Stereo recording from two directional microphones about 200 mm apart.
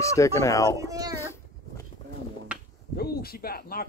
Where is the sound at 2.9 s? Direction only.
50° left (ahead or behind).